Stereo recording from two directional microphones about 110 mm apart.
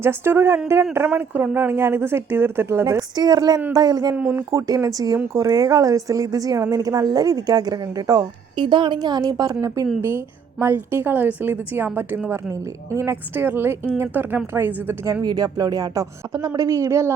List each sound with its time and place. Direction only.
0.0 s a woman's voice: 20° right (ahead or behind)
2.8 s speech: 35° right (ahead or behind)
4.1 s speech: 15° right (ahead or behind)
4.5 s a woman's voice: 30° right (ahead or behind)
15.0 s a woman's voice: 35° right (ahead or behind)